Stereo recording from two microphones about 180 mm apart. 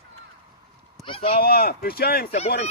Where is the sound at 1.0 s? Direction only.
30° left (ahead or behind).